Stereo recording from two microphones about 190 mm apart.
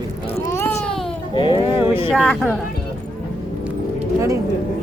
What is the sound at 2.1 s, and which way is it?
Speech, centre (ahead or behind).